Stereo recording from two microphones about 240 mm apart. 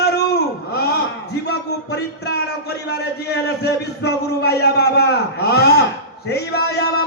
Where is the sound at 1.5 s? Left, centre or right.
Left.